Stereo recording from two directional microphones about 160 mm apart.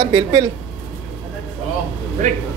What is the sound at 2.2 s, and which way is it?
Speech, 50° right (ahead or behind).